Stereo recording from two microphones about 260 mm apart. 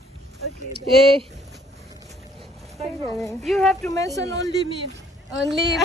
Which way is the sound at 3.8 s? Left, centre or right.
Centre.